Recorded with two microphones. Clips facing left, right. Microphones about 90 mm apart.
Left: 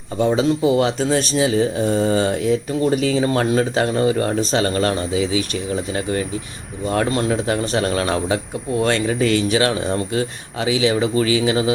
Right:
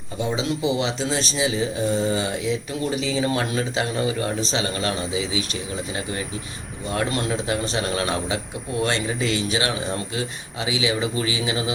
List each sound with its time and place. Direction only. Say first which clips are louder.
0.3 s speech: left 7 dB; 45° left (ahead or behind)
6.8 s speech: left 5 dB; 40° left (ahead or behind)
9.2 s speech: left 8 dB; 25° right (ahead or behind)
9.6 s speech: left 6 dB; 40° left (ahead or behind)